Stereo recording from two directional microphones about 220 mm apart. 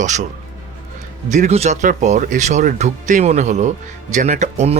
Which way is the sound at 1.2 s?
30° right (ahead or behind).